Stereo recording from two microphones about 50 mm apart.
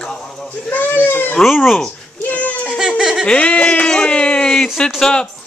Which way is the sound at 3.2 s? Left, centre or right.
Left.